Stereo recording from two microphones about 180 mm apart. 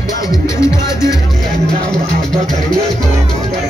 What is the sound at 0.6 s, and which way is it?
Music, 15° left (ahead or behind).